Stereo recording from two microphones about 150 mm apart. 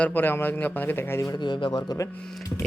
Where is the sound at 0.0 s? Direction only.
15° left (ahead or behind); by 2.0 s 30° left (ahead or behind).